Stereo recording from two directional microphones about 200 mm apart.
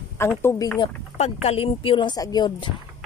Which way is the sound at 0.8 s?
30° left (ahead or behind).